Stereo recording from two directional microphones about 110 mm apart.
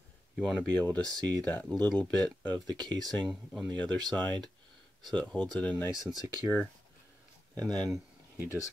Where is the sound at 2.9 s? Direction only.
Centre (ahead or behind).